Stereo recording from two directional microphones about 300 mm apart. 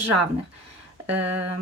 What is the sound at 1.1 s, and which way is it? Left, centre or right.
Speech, right.